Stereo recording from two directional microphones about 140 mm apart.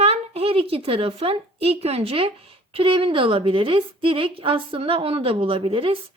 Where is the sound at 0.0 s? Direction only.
45° right (ahead or behind).